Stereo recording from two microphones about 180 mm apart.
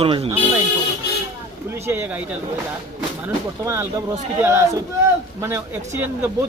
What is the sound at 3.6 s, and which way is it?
Speech, 15° right (ahead or behind).